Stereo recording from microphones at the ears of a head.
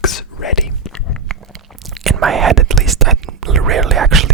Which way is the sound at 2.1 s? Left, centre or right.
Right.